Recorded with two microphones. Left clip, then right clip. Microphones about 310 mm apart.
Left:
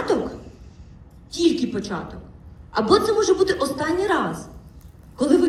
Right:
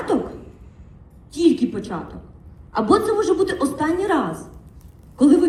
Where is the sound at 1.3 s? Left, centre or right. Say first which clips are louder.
Right 2 dB; right.